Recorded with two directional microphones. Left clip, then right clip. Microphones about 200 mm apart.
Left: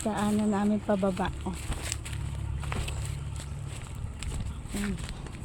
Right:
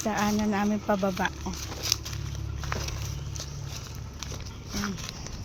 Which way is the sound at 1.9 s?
25° right (ahead or behind).